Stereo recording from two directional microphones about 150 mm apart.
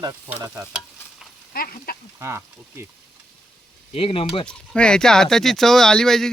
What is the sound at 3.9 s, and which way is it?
Speech, 40° left (ahead or behind).